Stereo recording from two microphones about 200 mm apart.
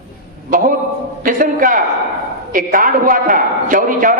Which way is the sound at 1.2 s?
45° right (ahead or behind).